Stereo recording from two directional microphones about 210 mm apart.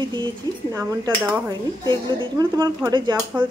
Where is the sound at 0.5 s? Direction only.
20° right (ahead or behind).